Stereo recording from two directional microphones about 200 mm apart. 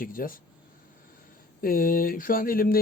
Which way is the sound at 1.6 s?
45° left (ahead or behind).